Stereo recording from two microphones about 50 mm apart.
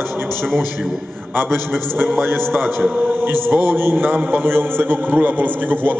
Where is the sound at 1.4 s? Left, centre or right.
Right.